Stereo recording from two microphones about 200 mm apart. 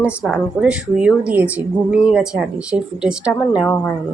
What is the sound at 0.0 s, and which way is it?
A woman's voice, 5° right (ahead or behind).